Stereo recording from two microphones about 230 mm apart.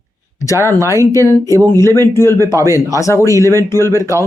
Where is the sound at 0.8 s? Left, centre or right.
Centre.